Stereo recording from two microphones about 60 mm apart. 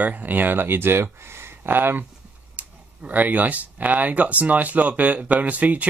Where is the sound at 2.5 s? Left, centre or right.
Right.